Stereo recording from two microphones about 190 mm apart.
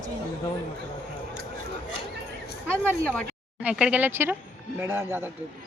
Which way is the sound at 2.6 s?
5° left (ahead or behind).